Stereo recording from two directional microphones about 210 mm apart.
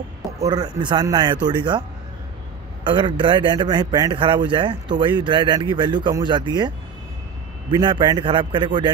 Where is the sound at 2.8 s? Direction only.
25° right (ahead or behind).